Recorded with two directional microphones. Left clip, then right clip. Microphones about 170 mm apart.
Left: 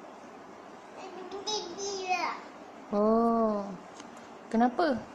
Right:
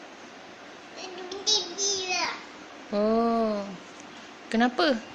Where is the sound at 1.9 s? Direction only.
25° left (ahead or behind).